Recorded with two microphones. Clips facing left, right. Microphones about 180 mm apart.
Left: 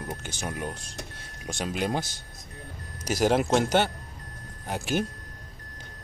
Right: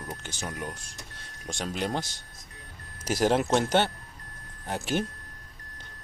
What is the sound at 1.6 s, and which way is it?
A man's voice, 10° left (ahead or behind).